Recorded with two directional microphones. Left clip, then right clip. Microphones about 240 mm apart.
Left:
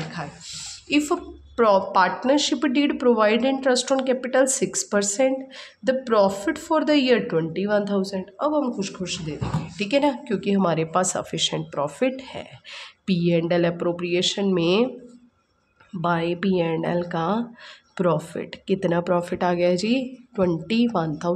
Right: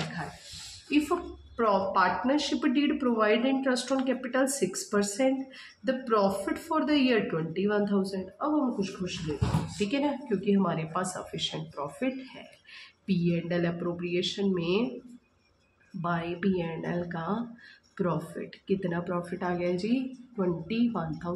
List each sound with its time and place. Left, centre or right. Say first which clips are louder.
0.8 s a woman's voice: left 5 dB; left
16.0 s speech: left 8 dB; left